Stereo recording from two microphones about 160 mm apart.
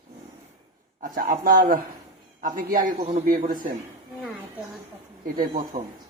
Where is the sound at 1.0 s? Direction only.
55° right (ahead or behind).